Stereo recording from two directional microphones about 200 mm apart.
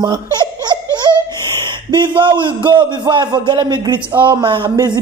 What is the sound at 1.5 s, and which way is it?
Speech, 25° right (ahead or behind).